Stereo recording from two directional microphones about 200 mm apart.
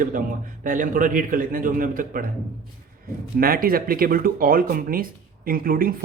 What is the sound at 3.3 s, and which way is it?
Speech, 45° right (ahead or behind).